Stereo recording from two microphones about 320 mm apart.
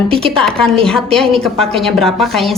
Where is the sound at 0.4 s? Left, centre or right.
Centre.